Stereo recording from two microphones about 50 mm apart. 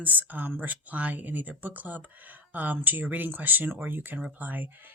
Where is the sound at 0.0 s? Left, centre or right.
Right.